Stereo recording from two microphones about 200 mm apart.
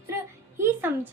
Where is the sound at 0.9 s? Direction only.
10° right (ahead or behind).